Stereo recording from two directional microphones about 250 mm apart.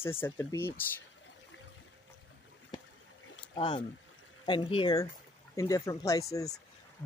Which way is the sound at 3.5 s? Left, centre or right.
Centre.